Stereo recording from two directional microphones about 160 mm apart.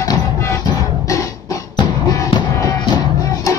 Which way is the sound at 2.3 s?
20° left (ahead or behind).